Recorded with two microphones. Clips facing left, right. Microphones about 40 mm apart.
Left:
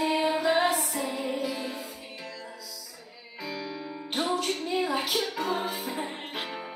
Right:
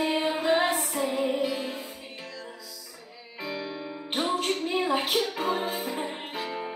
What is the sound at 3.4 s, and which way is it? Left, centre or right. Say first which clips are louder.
Music: right 2 dB; right.